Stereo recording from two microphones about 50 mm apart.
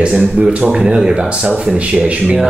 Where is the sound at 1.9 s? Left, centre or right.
Right.